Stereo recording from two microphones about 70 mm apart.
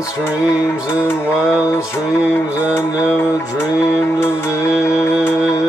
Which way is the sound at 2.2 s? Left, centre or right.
Centre.